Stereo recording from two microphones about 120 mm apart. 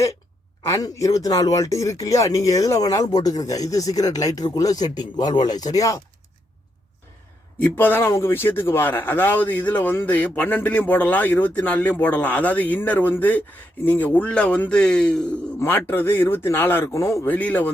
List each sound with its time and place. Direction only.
0.7 s speech: 25° left (ahead or behind)
7.6 s a man's voice: 15° left (ahead or behind)
15.5 s a man's voice: 15° left (ahead or behind)
17.3 s a man's voice: 15° left (ahead or behind)